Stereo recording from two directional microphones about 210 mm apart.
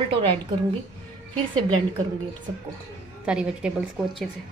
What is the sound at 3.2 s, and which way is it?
A woman's voice, 5° right (ahead or behind).